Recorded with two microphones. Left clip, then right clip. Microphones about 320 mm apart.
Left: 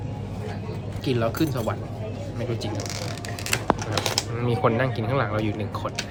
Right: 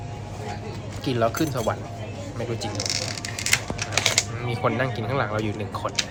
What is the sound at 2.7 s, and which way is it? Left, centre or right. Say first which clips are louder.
Speech: right 4 dB; left.